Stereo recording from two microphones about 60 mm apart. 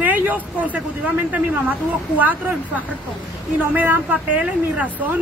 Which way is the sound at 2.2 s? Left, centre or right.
Right.